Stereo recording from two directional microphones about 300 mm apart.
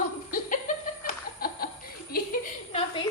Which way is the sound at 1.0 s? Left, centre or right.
Left.